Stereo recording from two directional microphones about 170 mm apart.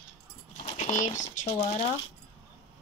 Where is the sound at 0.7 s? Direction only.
45° left (ahead or behind).